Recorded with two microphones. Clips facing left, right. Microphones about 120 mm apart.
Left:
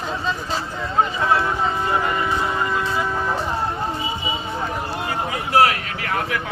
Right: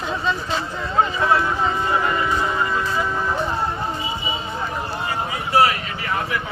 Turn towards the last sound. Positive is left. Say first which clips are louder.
# even
turn(degrees=65)  # may be behind; listen again after turning